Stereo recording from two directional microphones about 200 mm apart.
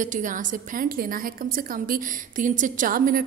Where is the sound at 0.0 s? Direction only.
40° right (ahead or behind).